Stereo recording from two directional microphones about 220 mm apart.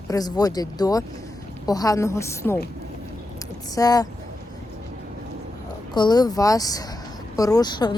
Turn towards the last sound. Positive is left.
turn(degrees=20)  # may be behind; listen again after turning